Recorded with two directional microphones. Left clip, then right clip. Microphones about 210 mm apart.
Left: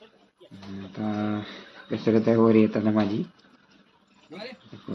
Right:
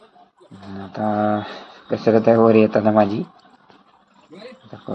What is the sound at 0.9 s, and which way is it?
Speech, 10° right (ahead or behind).